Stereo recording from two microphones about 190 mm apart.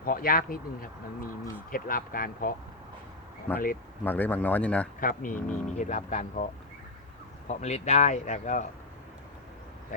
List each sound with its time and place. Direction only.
0.0 s speech: 50° left (ahead or behind)
3.5 s speech: 10° left (ahead or behind)
4.9 s speech: 45° left (ahead or behind)